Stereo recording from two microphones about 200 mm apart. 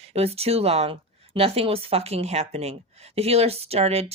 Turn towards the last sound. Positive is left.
turn(degrees=-30)  # may be behind; listen again after turning